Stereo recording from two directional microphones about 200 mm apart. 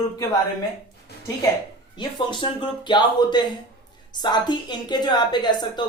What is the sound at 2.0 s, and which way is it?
Speech, 25° left (ahead or behind).